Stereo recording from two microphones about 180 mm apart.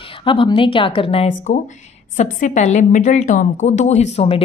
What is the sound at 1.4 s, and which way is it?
A woman's voice, 40° left (ahead or behind).